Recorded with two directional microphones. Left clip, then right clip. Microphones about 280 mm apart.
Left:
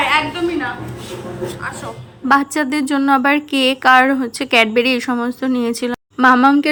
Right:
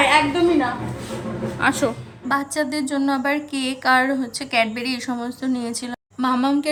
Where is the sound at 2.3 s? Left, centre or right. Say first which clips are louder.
Left 7 dB; centre.